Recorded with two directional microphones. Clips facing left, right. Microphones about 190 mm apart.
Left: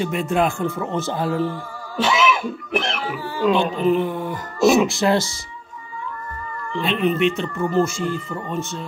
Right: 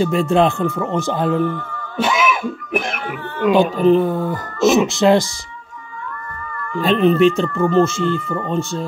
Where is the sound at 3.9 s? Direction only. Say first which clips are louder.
Right 5 dB; 35° right (ahead or behind).